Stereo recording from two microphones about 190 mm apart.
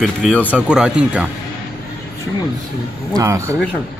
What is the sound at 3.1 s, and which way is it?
Speech, 15° right (ahead or behind).